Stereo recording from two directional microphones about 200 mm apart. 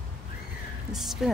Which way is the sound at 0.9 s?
Centre (ahead or behind).